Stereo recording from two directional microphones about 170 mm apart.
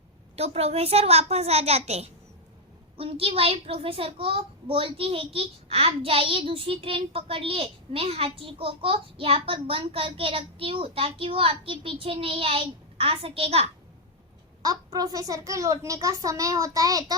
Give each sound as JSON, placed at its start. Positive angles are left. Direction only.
{"t": 0.3, "sound": "a child's voice", "side_deg": -35}
{"t": 14.6, "sound": "a child's voice", "side_deg": -20}